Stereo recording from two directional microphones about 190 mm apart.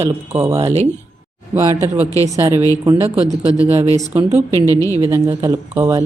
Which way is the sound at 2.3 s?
15° right (ahead or behind).